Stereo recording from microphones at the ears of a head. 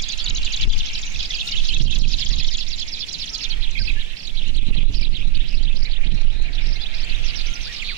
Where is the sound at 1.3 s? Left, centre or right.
Right.